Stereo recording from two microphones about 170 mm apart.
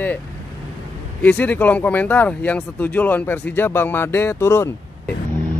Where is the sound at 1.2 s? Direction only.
10° left (ahead or behind).